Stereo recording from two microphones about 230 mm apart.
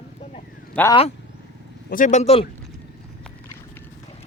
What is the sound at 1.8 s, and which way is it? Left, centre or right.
Speech, left.